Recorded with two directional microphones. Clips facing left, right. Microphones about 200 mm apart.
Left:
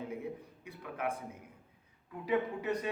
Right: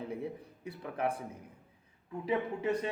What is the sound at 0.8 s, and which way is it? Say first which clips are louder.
A man's voice: right 3 dB; 30° right (ahead or behind).